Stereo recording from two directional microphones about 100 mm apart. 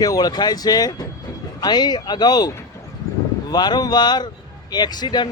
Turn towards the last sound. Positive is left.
turn(degrees=45)  # may be behind; listen again after turning